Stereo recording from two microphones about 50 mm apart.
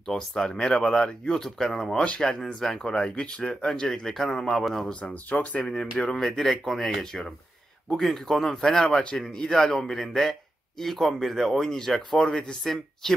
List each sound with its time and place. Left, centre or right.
0.0 s speech: centre
3.8 s speech: centre
5.3 s speech: left
5.7 s speech: centre